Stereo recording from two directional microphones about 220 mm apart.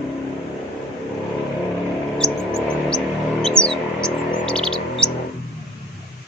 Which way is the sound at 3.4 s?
5° left (ahead or behind).